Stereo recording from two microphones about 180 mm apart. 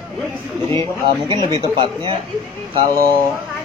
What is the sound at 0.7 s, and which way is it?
Speech, 25° right (ahead or behind).